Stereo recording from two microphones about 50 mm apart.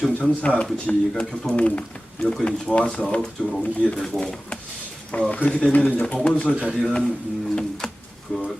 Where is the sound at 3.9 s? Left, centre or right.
Centre.